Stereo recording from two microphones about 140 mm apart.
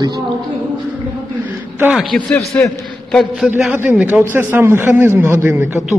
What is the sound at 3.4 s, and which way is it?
A man's voice, 10° right (ahead or behind).